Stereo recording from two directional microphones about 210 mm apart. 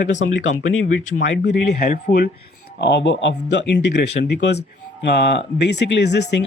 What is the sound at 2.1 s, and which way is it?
A man's voice, 50° left (ahead or behind).